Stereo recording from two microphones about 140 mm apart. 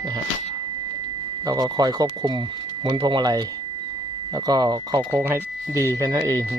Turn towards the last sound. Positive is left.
turn(degrees=-25)  # may be behind; listen again after turning